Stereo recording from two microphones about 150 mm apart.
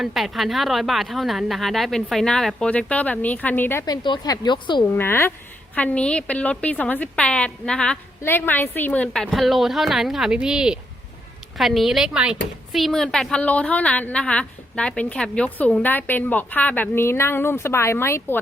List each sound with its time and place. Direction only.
0.0 s a woman's voice: centre (ahead or behind)
3.8 s speech: 30° left (ahead or behind)
4.9 s a woman's voice: 15° left (ahead or behind)